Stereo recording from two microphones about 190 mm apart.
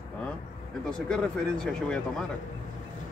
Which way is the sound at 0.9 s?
5° left (ahead or behind).